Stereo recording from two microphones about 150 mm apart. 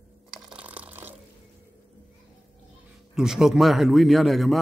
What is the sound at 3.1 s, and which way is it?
Speech, 5° right (ahead or behind).